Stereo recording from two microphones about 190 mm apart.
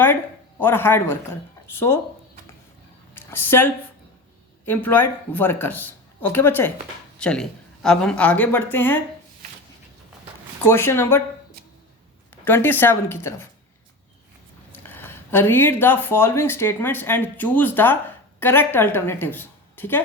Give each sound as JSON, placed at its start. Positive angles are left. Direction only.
{"t": 0.6, "sound": "speech", "side_deg": 10}
{"t": 3.2, "sound": "speech", "side_deg": 10}
{"t": 10.7, "sound": "speech", "side_deg": 10}
{"t": 12.5, "sound": "speech", "side_deg": 10}
{"t": 14.8, "sound": "a woman's voice", "side_deg": 10}